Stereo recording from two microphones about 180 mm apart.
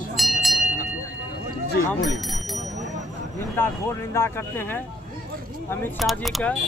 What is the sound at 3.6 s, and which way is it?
Speech, 10° left (ahead or behind).